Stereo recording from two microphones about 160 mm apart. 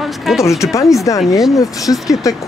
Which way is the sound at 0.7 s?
20° left (ahead or behind).